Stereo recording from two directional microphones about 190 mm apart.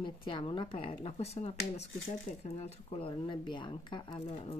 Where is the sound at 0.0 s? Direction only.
25° left (ahead or behind).